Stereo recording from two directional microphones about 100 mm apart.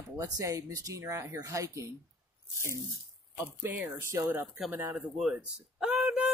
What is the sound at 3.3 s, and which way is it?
Speech, 20° right (ahead or behind).